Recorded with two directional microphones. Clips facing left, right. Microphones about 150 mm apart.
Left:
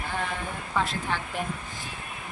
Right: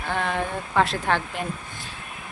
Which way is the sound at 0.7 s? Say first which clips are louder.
Right 6 dB; 80° right.